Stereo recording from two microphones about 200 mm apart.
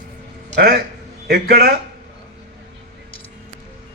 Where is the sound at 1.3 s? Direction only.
50° right (ahead or behind).